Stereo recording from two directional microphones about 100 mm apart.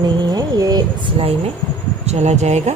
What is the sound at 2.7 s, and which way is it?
Speech, 90° right.